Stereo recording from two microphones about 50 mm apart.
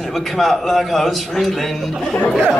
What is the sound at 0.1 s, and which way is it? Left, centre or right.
A man's voice, centre.